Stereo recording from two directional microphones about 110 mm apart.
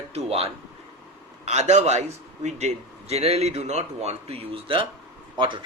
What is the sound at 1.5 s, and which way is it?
A man's voice, 90° right.